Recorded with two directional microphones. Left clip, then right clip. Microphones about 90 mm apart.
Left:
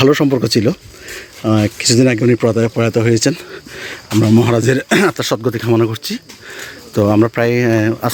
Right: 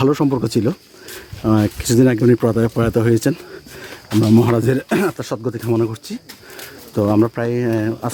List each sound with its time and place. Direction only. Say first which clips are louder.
0.0 s speech: left 5 dB; 15° right (ahead or behind)
1.4 s speech: left 3 dB; 30° right (ahead or behind)
3.8 s speech: left 3 dB; centre (ahead or behind)
4.4 s speech: left 3 dB; 20° right (ahead or behind)
4.8 s speech: left 6 dB; centre (ahead or behind)
5.0 s speech: left 6 dB; 20° left (ahead or behind); by 7.3 s 5° right (ahead or behind)
7.3 s speech: left 6 dB; 10° left (ahead or behind)